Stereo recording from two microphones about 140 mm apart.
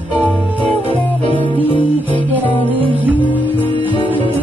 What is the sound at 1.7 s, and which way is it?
Music, 35° left (ahead or behind).